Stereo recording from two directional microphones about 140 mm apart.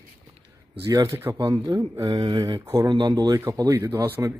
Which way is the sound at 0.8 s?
25° right (ahead or behind).